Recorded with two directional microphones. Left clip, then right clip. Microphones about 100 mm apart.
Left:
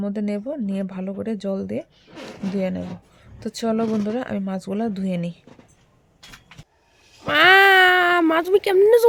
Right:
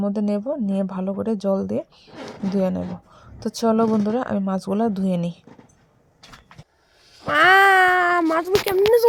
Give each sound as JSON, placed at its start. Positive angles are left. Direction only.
{"t": 0.0, "sound": "speech", "side_deg": -15}
{"t": 7.2, "sound": "a sound", "side_deg": 30}
{"t": 8.2, "sound": "speech", "side_deg": 45}